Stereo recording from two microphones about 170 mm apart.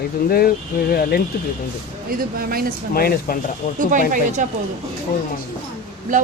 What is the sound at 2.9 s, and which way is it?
Speech, 60° left (ahead or behind).